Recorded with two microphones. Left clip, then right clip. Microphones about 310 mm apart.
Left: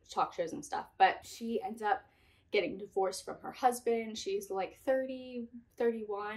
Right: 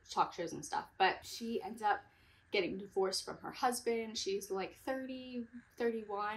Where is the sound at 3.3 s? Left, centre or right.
Centre.